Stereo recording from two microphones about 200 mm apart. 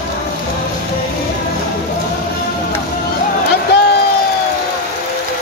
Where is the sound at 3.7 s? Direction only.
60° left (ahead or behind).